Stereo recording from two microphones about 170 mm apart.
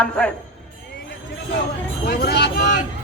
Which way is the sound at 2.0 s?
75° left (ahead or behind).